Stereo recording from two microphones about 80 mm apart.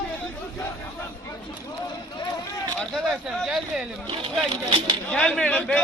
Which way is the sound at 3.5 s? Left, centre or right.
Centre.